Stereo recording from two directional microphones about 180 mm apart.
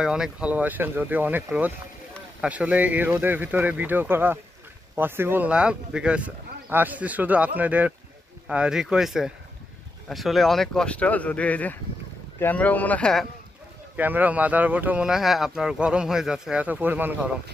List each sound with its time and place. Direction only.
0.0 s speech: 5° right (ahead or behind)
13.9 s speech: 10° right (ahead or behind)